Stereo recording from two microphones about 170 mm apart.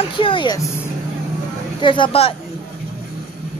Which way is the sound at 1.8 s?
30° left (ahead or behind).